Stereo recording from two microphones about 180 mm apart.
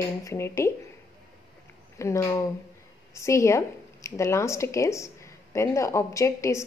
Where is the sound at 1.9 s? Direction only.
15° left (ahead or behind).